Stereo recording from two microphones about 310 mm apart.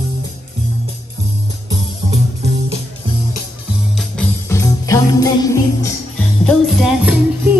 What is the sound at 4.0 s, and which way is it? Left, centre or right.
Music, centre.